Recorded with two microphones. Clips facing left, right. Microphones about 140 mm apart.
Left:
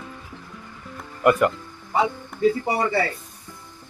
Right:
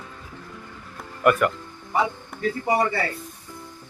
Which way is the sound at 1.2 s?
20° left (ahead or behind).